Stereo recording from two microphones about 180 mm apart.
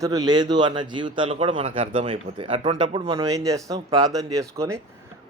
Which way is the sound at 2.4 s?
30° right (ahead or behind).